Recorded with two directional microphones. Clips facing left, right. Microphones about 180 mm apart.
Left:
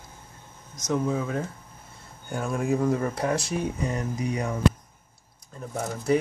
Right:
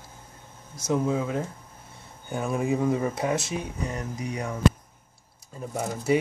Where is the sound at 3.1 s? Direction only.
20° right (ahead or behind).